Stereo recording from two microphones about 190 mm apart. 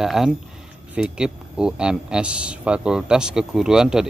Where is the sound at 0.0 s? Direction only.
Centre (ahead or behind).